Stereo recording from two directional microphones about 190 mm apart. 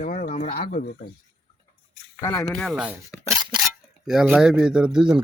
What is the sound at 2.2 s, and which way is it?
Speech, 15° left (ahead or behind).